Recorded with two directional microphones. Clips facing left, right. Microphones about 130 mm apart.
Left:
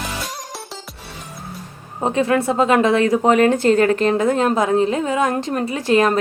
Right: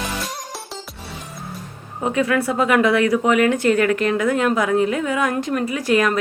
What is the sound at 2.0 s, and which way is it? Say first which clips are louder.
Speech: left 2 dB; 30° left (ahead or behind).